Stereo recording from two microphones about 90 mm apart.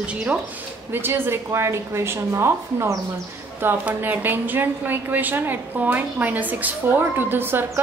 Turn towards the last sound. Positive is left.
turn(degrees=-25)  # may be behind; listen again after turning